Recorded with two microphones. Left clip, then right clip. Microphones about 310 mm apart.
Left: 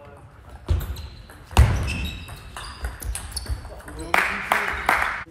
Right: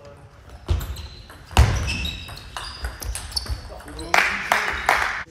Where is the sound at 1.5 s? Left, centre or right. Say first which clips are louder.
Right 2 dB; centre.